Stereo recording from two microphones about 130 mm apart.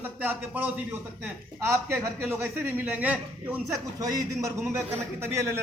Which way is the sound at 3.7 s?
30° right (ahead or behind).